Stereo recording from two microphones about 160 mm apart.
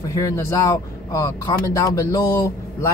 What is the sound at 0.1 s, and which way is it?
Speech, 20° left (ahead or behind).